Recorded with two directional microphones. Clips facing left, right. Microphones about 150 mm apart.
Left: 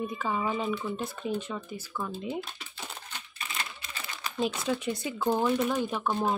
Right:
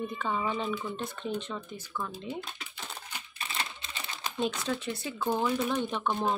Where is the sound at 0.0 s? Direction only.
5° left (ahead or behind).